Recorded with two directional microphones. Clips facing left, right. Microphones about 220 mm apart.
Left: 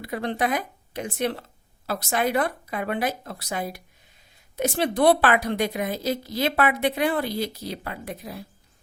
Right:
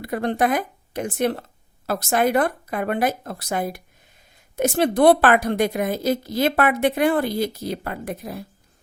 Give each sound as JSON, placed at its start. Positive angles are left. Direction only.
{"t": 0.0, "sound": "a woman's voice", "side_deg": -50}